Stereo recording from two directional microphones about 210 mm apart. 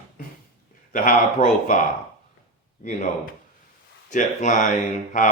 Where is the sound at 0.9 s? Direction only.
40° left (ahead or behind).